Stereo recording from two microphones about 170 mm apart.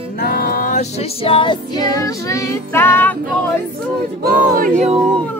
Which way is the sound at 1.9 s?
20° left (ahead or behind).